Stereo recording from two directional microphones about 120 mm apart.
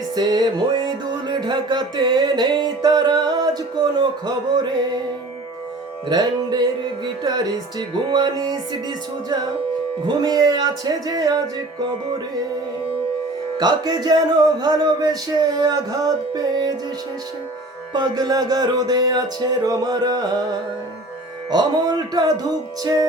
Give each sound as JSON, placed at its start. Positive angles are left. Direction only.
{"t": 0.2, "sound": "music", "side_deg": -35}
{"t": 6.1, "sound": "music", "side_deg": -35}
{"t": 10.2, "sound": "music", "side_deg": -35}
{"t": 13.6, "sound": "music", "side_deg": -35}
{"t": 17.9, "sound": "music", "side_deg": -35}
{"t": 21.5, "sound": "music", "side_deg": -35}